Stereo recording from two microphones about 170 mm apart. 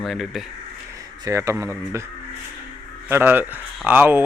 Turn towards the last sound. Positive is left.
turn(degrees=-10)  # may be behind; listen again after turning